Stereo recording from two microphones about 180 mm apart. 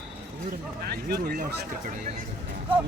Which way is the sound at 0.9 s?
60° right (ahead or behind).